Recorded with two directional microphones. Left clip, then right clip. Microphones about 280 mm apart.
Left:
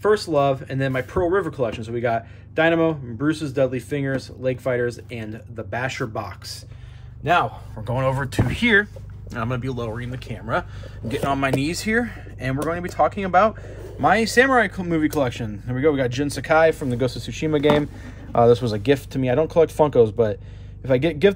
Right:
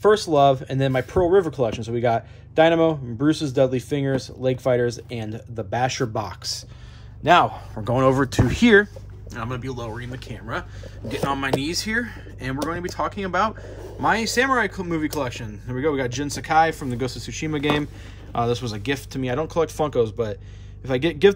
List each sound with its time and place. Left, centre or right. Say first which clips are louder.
0.0 s a man's voice: right 2 dB; centre
9.3 s speech: left 3 dB; centre